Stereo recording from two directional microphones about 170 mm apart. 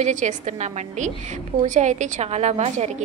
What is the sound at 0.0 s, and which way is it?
A woman's voice, 45° right (ahead or behind).